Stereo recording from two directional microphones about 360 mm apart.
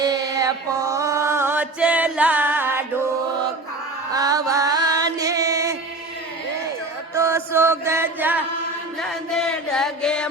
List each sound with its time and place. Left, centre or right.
0.0 s mantra: centre
4.1 s music: centre
7.1 s music: centre
9.0 s chant: centre